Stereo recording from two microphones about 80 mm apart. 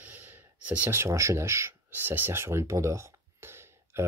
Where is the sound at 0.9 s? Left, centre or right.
Right.